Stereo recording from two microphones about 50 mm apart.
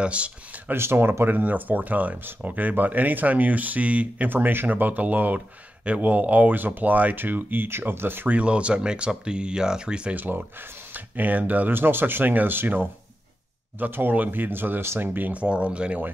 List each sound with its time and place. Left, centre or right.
0.0 s speech: right
0.7 s speech: right
1.4 s speech: right
4.3 s speech: right
8.3 s speech: right
10.1 s speech: right
11.7 s speech: right
15.4 s speech: right